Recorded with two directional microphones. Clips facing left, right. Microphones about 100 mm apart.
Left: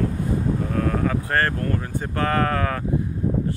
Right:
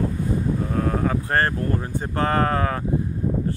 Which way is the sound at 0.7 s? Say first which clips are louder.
Even; 30° right (ahead or behind).